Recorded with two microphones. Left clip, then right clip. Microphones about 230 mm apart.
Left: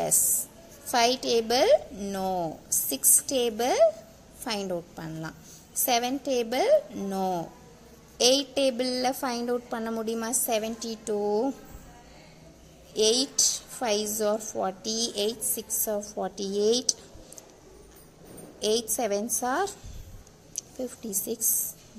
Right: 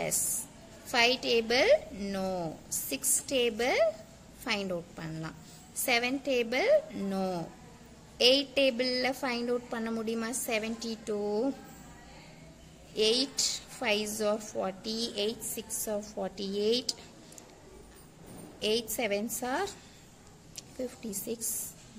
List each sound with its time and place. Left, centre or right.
0.9 s a woman's voice: centre
12.9 s a woman's voice: centre
18.6 s a woman's voice: centre